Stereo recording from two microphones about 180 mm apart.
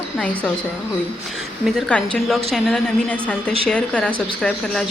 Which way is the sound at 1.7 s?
5° left (ahead or behind).